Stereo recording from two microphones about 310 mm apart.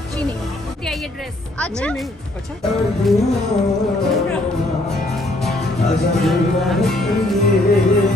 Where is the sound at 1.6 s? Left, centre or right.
Centre.